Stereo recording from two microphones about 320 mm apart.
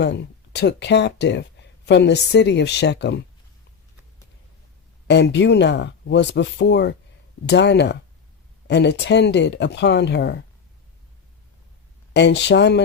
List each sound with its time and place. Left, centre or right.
0.0 s speech: left
5.0 s speech: left
12.1 s speech: left